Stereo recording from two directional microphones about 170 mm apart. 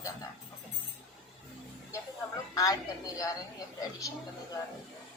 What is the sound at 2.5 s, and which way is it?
Speech, 20° left (ahead or behind).